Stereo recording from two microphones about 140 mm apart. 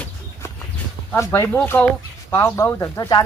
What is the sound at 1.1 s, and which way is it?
Speech, 20° left (ahead or behind).